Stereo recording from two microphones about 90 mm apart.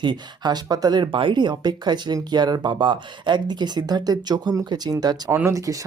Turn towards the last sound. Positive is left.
turn(degrees=-35)  # may be behind; listen again after turning